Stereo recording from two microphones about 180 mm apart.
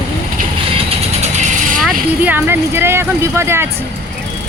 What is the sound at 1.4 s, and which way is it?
Vehicle, 45° right (ahead or behind).